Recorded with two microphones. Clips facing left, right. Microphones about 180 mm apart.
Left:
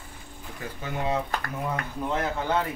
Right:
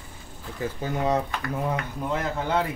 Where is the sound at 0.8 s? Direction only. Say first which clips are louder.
Right 3 dB; 40° right (ahead or behind).